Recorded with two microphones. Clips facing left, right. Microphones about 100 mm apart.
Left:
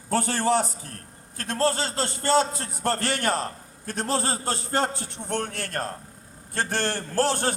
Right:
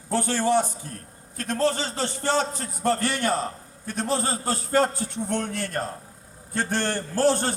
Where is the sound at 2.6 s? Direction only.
80° left.